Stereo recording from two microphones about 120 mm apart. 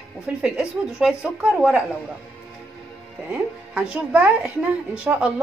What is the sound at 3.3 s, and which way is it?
Speech, 10° right (ahead or behind).